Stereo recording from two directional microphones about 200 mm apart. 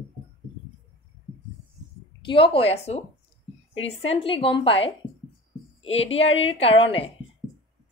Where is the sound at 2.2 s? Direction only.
25° left (ahead or behind).